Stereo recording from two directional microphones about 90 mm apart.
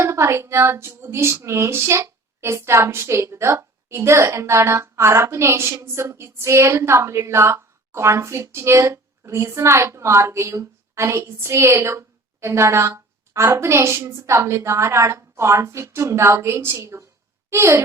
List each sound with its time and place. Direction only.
0.0 s speech: 30° right (ahead or behind)